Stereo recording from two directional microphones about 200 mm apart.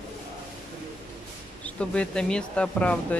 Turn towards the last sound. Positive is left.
turn(degrees=5)  # may be behind; listen again after turning